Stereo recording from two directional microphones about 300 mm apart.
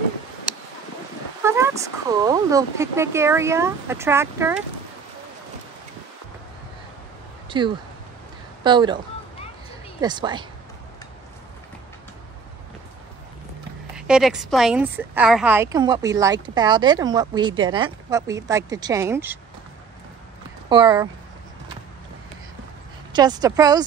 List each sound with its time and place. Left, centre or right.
1.4 s a woman's voice: centre
7.4 s a sound: centre
8.6 s a woman's voice: centre
13.9 s a woman's voice: centre
20.7 s a woman's voice: centre
23.1 s a woman's voice: centre